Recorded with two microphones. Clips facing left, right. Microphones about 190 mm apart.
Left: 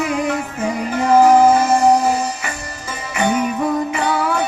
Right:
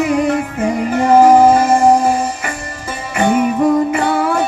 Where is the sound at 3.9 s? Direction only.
50° right (ahead or behind).